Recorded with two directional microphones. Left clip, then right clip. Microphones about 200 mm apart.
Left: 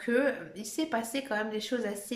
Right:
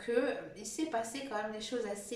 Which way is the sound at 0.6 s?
45° left (ahead or behind).